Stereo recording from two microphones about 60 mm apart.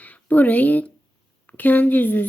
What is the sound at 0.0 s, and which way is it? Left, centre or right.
Speech, left.